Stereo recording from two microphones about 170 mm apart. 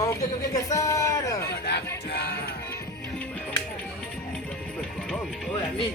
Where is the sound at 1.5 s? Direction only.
80° left.